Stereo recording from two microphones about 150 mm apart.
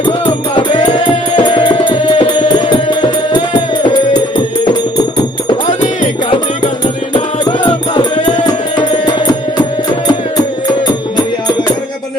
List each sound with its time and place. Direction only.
0.0 s music: 30° left (ahead or behind)
4.9 s music: 30° left (ahead or behind)